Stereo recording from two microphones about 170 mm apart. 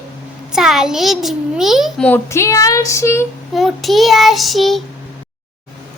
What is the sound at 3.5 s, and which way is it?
A child's voice, centre (ahead or behind).